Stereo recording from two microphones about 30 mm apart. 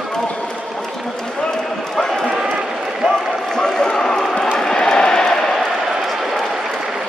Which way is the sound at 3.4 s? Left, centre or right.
Centre.